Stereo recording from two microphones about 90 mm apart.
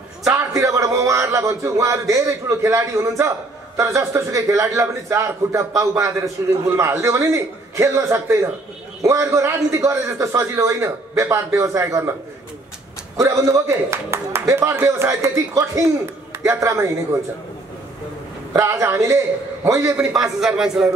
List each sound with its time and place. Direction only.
0.6 s a man's voice: 35° right (ahead or behind)
13.2 s a man's voice: 35° right (ahead or behind)
18.5 s a man's voice: 30° right (ahead or behind)
20.0 s speech: 5° right (ahead or behind)